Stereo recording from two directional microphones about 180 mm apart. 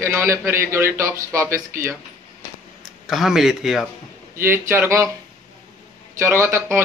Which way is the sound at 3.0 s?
Centre (ahead or behind).